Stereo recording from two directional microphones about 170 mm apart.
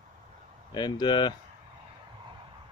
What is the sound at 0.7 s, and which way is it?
Speech, 25° left (ahead or behind).